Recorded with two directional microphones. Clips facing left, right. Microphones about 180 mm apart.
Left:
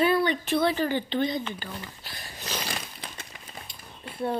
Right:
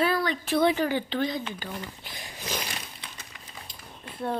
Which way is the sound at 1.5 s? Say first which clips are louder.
Right 2 dB; 15° right (ahead or behind).